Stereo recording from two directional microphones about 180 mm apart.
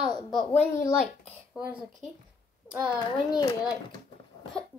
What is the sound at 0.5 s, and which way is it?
Child singing, 15° left (ahead or behind).